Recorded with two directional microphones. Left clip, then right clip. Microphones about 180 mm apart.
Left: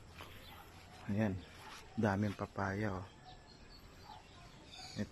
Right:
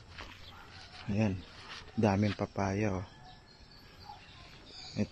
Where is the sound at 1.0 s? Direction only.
Centre (ahead or behind).